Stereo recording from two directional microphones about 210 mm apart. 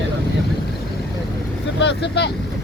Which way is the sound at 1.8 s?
55° left (ahead or behind).